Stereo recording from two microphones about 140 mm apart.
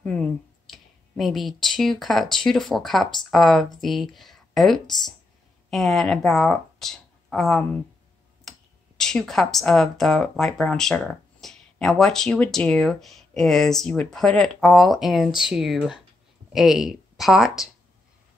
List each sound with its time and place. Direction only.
0.7 s speech: centre (ahead or behind)